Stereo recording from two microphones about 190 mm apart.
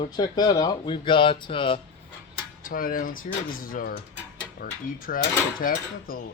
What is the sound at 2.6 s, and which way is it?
Speech, 50° left (ahead or behind).